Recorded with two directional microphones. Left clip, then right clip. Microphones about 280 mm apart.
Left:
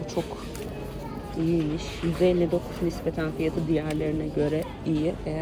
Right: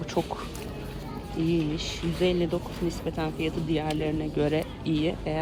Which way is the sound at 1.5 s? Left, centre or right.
Centre.